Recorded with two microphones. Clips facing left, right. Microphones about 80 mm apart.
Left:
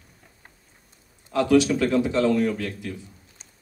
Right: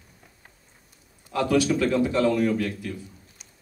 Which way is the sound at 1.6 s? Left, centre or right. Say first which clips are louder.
Left 1 dB; left.